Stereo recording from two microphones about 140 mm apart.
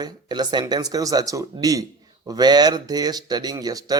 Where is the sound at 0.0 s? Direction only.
30° right (ahead or behind).